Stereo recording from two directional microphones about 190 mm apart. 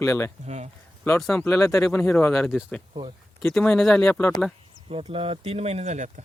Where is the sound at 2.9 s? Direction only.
30° right (ahead or behind).